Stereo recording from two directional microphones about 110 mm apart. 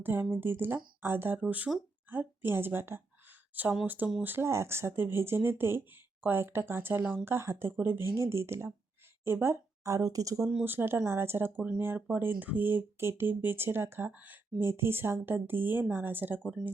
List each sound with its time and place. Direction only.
0.0 s a woman's voice: 20° right (ahead or behind)
10.6 s speech: 20° right (ahead or behind)